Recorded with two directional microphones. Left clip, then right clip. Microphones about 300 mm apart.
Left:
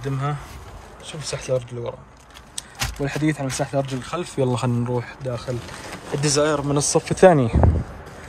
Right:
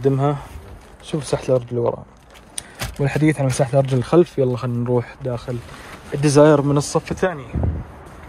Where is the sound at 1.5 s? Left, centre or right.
Centre.